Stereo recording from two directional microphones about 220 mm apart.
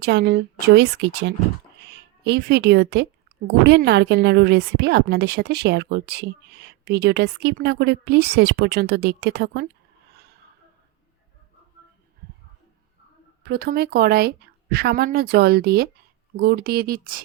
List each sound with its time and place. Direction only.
0.0 s speech: 50° right (ahead or behind)
13.4 s speech: 45° right (ahead or behind)